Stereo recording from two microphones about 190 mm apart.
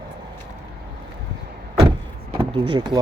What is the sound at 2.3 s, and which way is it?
Speech, 30° right (ahead or behind).